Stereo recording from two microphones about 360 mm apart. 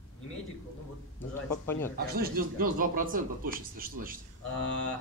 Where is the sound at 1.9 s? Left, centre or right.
Right.